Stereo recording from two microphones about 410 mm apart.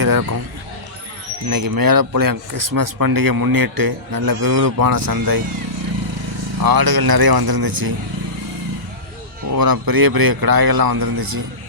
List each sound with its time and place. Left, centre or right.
0.0 s a sound: right
1.5 s speech: right
6.6 s speech: right
9.5 s speech: right